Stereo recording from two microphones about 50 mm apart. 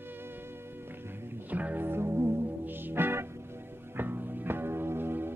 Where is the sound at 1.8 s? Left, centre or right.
Right.